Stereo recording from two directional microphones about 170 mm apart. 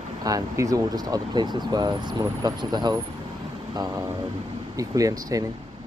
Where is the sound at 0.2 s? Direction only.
20° right (ahead or behind).